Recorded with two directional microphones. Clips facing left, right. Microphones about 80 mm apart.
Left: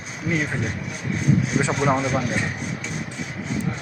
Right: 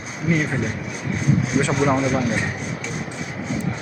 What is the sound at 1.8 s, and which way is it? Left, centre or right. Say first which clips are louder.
Speech: right 2 dB; centre.